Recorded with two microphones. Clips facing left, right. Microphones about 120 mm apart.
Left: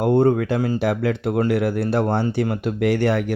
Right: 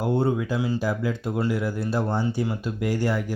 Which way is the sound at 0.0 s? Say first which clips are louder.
Left 7 dB; 55° left (ahead or behind).